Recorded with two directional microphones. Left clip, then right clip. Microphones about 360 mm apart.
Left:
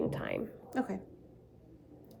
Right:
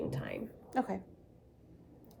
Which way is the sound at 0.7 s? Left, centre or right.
Centre.